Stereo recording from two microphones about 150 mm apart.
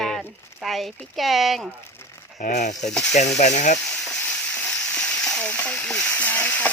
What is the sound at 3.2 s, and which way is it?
Speech, 50° left (ahead or behind).